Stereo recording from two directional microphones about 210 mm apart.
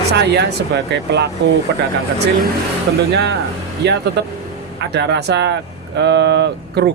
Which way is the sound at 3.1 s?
50° right (ahead or behind).